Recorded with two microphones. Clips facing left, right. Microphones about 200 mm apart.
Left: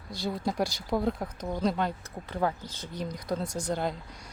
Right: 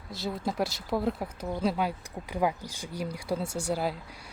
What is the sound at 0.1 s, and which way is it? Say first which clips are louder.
Speech: left 1 dB; centre (ahead or behind).